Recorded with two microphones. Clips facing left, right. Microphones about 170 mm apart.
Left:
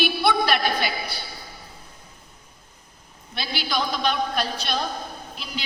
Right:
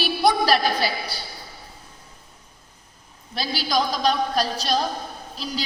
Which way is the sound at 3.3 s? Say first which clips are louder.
Right 4 dB; 35° right (ahead or behind).